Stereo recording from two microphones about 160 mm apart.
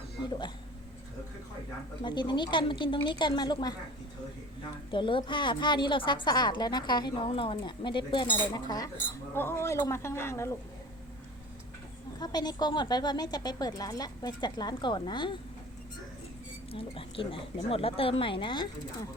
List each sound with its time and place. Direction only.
0.2 s hiccup: 25° left (ahead or behind)
2.0 s a woman's voice: 30° left (ahead or behind)
4.9 s a woman's voice: 30° left (ahead or behind)
9.3 s speech: 15° left (ahead or behind)
12.2 s a woman's voice: 25° left (ahead or behind)
16.7 s speech: 35° left (ahead or behind)